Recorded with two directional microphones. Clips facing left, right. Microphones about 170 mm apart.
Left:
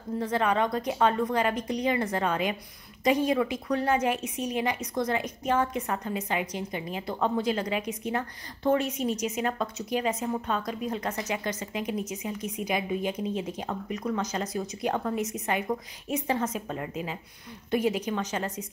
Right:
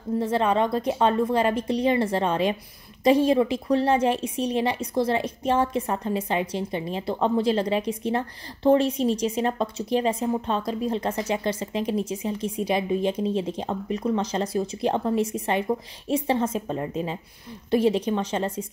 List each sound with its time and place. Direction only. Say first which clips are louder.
0.2 s speech: right 3 dB; 25° right (ahead or behind)